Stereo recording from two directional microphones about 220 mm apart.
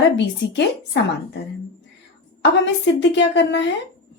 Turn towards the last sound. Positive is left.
turn(degrees=55)  # may be behind; listen again after turning